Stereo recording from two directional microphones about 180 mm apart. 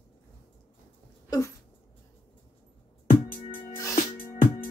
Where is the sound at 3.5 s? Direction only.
15° left (ahead or behind).